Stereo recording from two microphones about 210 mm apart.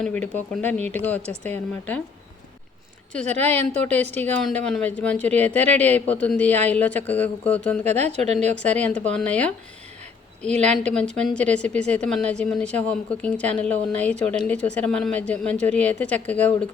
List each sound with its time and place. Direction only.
0.0 s speech: 5° left (ahead or behind)
3.1 s speech: 5° left (ahead or behind)
3.3 s speech: 30° right (ahead or behind)
3.8 s speech: 5° left (ahead or behind)
7.9 s speech: 30° right (ahead or behind)
8.6 s speech: 5° left (ahead or behind)
10.5 s speech: 35° right (ahead or behind)
10.8 s a woman's voice: 5° left (ahead or behind)